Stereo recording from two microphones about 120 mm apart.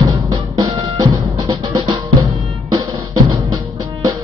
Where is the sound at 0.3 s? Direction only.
30° right (ahead or behind).